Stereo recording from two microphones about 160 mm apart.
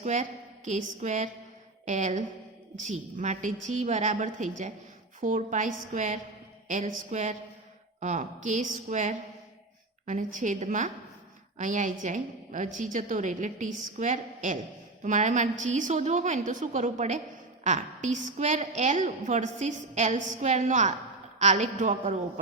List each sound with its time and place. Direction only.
0.0 s a woman's voice: 50° right (ahead or behind)